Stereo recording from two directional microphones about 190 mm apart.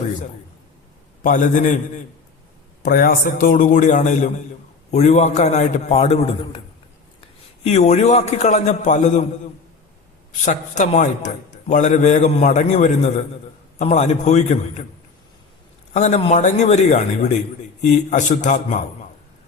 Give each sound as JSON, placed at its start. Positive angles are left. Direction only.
{"t": 1.2, "sound": "a man's voice", "side_deg": 45}
{"t": 2.8, "sound": "a man's voice", "side_deg": 50}
{"t": 10.4, "sound": "a man's voice", "side_deg": 40}
{"t": 15.9, "sound": "a man's voice", "side_deg": 35}